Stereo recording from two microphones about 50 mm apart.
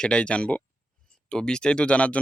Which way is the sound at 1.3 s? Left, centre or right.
Centre.